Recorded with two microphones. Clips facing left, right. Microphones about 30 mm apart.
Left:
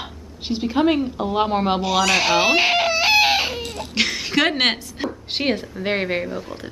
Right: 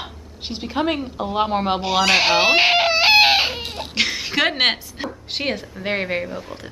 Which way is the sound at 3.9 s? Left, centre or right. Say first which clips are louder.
Left 1 dB; centre.